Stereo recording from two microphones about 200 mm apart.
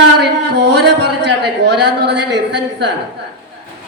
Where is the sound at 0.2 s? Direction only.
60° right (ahead or behind).